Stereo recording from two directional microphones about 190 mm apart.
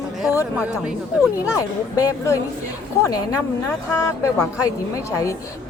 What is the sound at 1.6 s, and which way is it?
A woman's voice, 15° left (ahead or behind).